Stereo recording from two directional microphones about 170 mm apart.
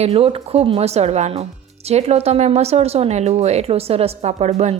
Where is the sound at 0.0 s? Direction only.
35° right (ahead or behind).